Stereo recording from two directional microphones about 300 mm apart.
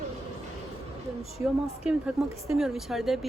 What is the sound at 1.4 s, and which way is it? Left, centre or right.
A woman's voice, centre.